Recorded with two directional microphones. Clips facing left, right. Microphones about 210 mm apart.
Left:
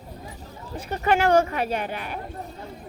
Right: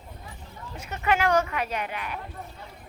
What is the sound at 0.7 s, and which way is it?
Speech, 30° left (ahead or behind).